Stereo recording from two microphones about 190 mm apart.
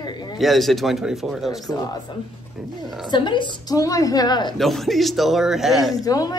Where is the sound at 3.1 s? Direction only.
25° left (ahead or behind).